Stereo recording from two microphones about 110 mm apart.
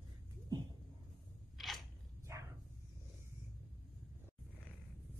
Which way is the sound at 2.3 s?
25° right (ahead or behind).